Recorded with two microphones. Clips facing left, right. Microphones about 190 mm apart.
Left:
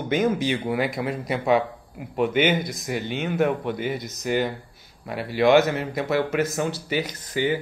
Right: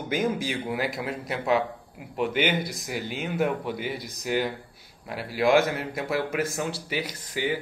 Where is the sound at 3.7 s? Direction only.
50° left (ahead or behind).